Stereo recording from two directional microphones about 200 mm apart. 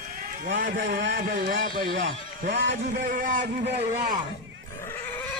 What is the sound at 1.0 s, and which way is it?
Speech, 65° right (ahead or behind).